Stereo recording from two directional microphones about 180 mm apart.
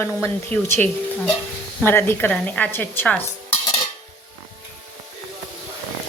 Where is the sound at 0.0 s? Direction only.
10° left (ahead or behind).